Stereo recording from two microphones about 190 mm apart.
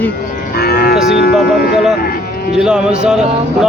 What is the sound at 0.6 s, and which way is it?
Cattle, 50° left (ahead or behind).